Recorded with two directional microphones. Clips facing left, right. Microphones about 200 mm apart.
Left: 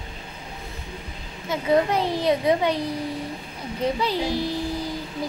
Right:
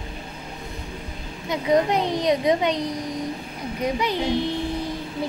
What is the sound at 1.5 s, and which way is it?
A woman's voice, 20° right (ahead or behind).